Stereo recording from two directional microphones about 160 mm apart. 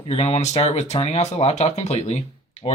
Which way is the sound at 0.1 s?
40° left (ahead or behind).